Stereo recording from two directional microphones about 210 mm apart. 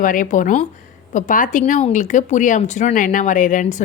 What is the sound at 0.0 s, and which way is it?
A woman's voice, 40° left (ahead or behind).